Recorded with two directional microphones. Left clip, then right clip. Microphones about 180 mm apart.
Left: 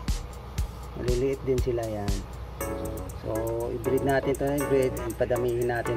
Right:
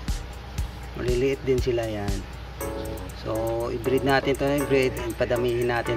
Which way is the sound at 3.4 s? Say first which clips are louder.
Right 4 dB; 20° right (ahead or behind).